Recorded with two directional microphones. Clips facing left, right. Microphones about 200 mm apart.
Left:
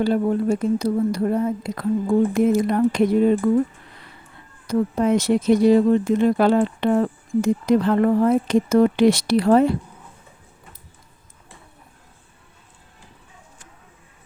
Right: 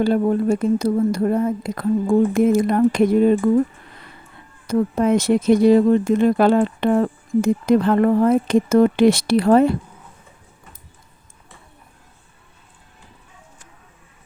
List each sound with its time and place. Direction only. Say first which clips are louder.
0.0 s speech: right 2 dB; 50° right (ahead or behind)
4.6 s speech: right 2 dB; 50° right (ahead or behind)